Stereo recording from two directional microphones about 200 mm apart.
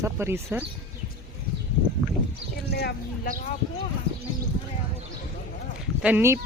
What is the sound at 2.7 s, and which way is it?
Speech, 55° left (ahead or behind).